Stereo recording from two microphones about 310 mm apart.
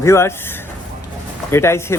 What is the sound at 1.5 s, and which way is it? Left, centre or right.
Speech, centre.